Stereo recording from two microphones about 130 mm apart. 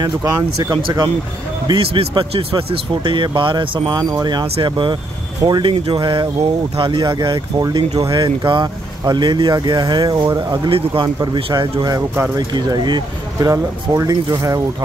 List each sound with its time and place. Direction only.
0.0 s speech: 30° right (ahead or behind)
1.7 s speech: 45° right (ahead or behind); by 14.6 s 25° right (ahead or behind)